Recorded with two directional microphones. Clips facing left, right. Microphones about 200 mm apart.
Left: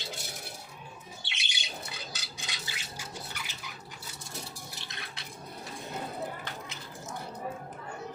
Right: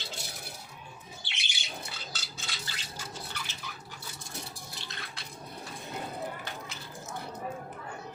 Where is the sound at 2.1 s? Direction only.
15° left (ahead or behind).